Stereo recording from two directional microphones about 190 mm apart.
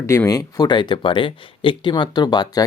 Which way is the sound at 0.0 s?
15° left (ahead or behind).